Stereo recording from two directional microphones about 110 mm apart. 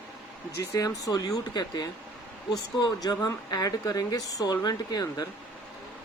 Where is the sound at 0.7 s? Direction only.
30° left (ahead or behind).